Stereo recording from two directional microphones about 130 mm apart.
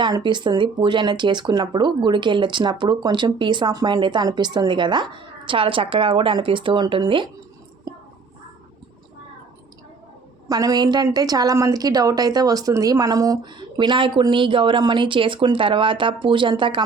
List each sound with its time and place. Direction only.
0.0 s speech: 35° right (ahead or behind)
10.5 s speech: 30° right (ahead or behind)